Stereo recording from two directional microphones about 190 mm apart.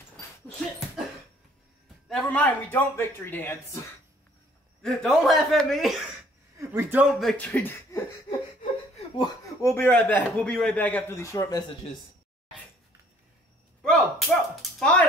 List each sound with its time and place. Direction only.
2.0 s a man's voice: 5° left (ahead or behind)
4.8 s speech: centre (ahead or behind)
6.6 s speech: 15° right (ahead or behind); by 8.0 s 10° left (ahead or behind)
8.9 s laughter: 30° left (ahead or behind)
9.6 s a man's voice: 15° left (ahead or behind)
13.8 s a sound: centre (ahead or behind)